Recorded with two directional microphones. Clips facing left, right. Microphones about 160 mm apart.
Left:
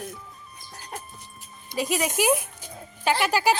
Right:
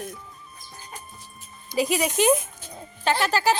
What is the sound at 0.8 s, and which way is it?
Music, 75° left (ahead or behind).